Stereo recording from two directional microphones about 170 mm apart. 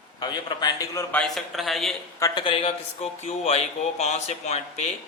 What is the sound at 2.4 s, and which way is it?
Speech, 30° left (ahead or behind).